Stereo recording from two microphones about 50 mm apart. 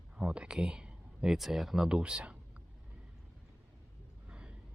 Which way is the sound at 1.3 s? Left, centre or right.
Centre.